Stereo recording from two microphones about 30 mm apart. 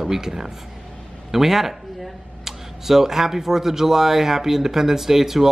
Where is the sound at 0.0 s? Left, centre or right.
Centre.